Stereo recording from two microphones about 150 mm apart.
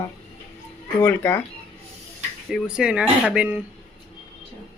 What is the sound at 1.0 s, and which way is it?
Speech, 15° left (ahead or behind).